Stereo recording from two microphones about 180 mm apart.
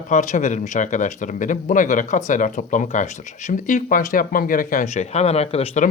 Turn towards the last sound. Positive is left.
turn(degrees=40)  # may be behind; listen again after turning